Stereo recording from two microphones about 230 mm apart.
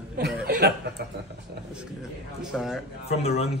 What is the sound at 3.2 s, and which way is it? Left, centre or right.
Speech, left.